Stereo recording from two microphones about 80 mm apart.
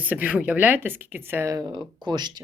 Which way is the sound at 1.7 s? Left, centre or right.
Right.